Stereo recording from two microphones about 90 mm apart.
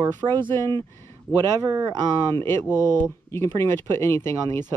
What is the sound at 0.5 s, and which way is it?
Speech, 30° left (ahead or behind).